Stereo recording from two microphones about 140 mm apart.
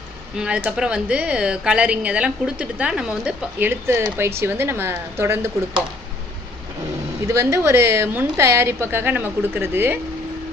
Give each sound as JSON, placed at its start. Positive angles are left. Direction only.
{"t": 0.3, "sound": "a woman's voice", "side_deg": -10}
{"t": 7.3, "sound": "a woman's voice", "side_deg": -20}